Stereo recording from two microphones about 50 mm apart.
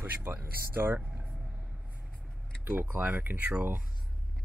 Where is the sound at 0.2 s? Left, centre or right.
Right.